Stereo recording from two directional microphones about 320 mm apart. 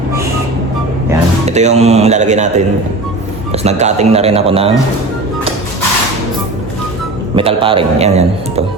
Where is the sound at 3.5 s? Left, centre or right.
Centre.